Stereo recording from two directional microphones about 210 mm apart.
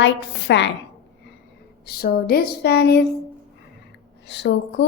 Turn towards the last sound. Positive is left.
turn(degrees=55)  # may be behind; listen again after turning